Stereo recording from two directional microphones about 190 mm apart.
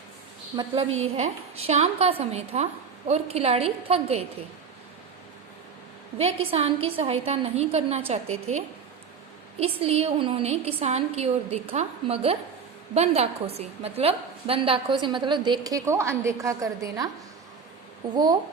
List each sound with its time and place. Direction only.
0.5 s a woman's voice: 20° right (ahead or behind)
0.9 s a woman's voice: 90° right
1.1 s a woman's voice: 35° right (ahead or behind)
6.1 s a woman's voice: 30° right (ahead or behind)
18.1 s a woman's voice: 20° right (ahead or behind)